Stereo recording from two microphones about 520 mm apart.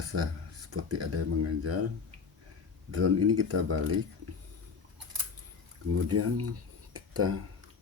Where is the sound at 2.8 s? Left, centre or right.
Right.